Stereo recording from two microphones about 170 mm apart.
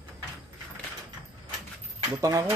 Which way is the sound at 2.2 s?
20° right (ahead or behind).